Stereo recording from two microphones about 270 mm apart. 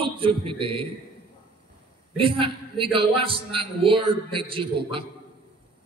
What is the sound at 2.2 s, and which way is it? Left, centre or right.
A man's voice, centre.